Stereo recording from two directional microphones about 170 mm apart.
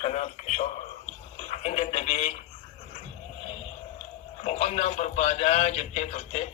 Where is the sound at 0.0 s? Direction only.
40° left (ahead or behind).